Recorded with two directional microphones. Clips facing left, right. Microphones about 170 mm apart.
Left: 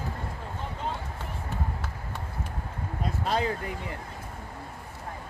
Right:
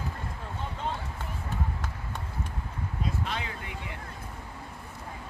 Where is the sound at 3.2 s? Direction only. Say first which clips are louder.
Left 8 dB; 40° left (ahead or behind).